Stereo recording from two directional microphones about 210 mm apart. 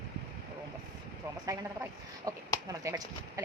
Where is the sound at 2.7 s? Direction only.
15° right (ahead or behind).